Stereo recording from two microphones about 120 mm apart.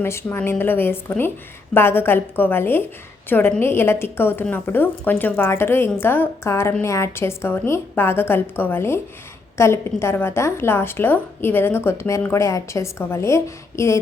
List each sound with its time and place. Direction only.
0.0 s a woman's voice: 20° left (ahead or behind)